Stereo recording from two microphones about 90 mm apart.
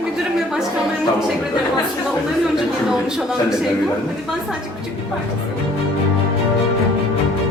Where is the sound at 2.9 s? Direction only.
5° right (ahead or behind).